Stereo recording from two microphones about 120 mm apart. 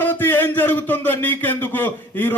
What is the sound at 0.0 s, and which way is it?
Speech, 15° left (ahead or behind).